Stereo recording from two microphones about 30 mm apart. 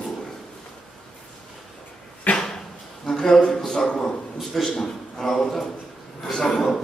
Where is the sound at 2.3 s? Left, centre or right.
Left.